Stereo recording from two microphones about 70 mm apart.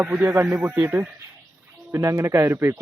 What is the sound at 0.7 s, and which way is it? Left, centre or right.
Speech, right.